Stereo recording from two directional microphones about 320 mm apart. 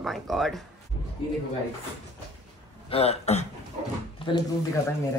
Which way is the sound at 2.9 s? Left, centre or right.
Centre.